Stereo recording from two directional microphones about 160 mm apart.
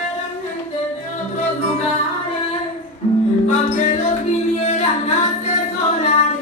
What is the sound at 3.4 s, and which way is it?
Music, 50° left (ahead or behind).